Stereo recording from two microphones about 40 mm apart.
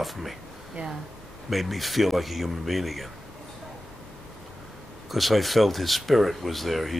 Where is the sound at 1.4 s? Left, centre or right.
Centre.